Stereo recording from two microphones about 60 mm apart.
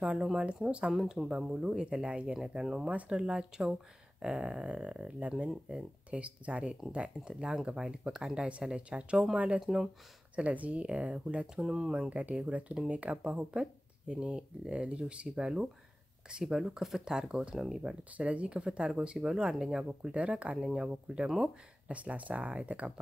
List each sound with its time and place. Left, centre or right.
0.6 s speech: centre
1.0 s speech: centre
1.3 s speech: centre
2.9 s speech: right
6.0 s speech: right
9.6 s speech: centre
10.3 s speech: right
11.6 s speech: centre